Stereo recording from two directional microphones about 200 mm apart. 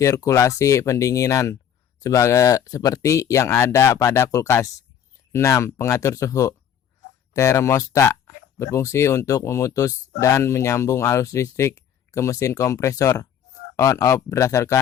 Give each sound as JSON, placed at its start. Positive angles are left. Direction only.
{"t": 0.0, "sound": "speech", "side_deg": 15}